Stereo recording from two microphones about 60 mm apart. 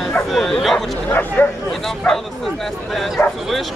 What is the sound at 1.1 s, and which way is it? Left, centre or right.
Speech, left.